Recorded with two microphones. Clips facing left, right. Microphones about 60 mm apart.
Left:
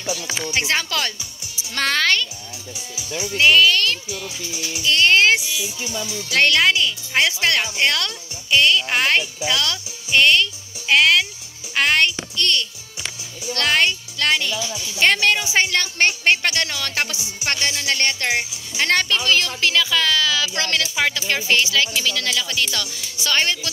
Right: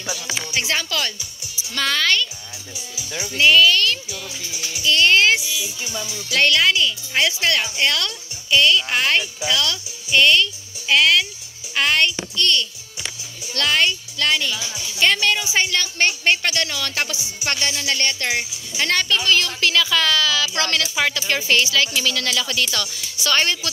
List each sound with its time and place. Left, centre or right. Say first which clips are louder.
0.5 s a woman's voice: left 2 dB; left
3.3 s a woman's voice: even; left
6.3 s a woman's voice: left 1 dB; left
11.7 s music: left 1 dB; left
13.5 s a woman's voice: left 1 dB; left
19.3 s speech: even; left
20.8 s speech: even; centre